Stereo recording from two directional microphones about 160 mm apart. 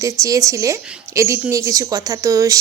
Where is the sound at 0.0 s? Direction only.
20° right (ahead or behind).